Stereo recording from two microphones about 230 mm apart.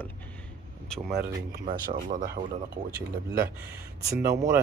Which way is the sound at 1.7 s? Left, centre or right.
Right.